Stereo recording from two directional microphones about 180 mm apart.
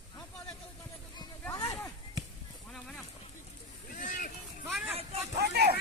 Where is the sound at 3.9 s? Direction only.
45° left (ahead or behind).